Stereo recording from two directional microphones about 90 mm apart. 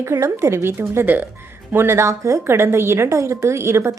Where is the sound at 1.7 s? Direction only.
30° right (ahead or behind).